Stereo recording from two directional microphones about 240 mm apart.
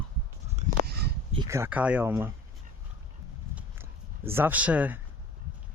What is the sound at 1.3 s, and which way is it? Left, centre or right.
Speech, centre.